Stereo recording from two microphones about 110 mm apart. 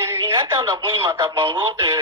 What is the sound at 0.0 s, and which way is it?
Speech, 25° right (ahead or behind).